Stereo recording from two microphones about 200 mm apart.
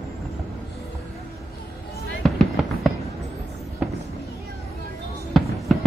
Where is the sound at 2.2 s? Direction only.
Centre (ahead or behind).